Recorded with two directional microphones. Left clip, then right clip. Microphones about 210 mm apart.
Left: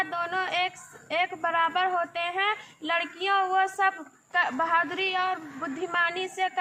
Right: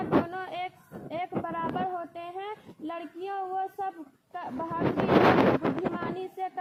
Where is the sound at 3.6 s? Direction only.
55° left (ahead or behind).